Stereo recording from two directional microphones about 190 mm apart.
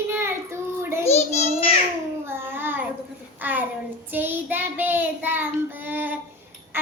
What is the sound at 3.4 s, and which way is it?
Speech, 10° right (ahead or behind).